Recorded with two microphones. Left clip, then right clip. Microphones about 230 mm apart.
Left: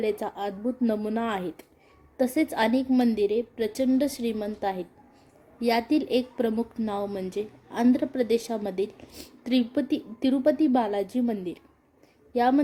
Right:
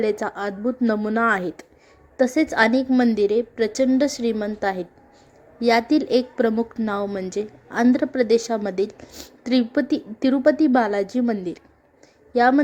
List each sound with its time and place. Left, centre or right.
0.0 s a woman's voice: centre